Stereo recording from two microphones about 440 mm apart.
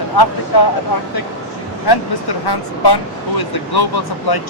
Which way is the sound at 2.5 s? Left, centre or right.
Left.